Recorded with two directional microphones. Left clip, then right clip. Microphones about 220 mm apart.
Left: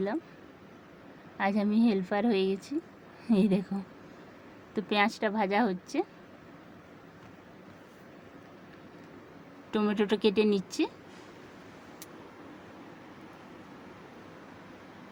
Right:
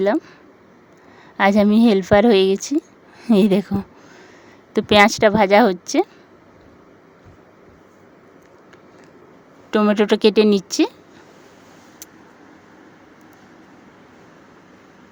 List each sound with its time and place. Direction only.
1.4 s a woman's voice: 50° right (ahead or behind)
9.7 s a woman's voice: 40° right (ahead or behind)